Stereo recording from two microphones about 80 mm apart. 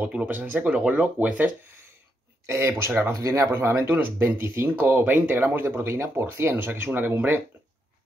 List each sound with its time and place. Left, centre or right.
0.0 s speech: centre
2.4 s speech: right